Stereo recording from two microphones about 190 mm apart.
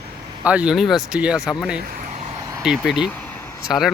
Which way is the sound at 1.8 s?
50° right (ahead or behind).